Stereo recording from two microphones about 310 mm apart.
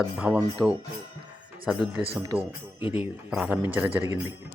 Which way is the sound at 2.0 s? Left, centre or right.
Centre.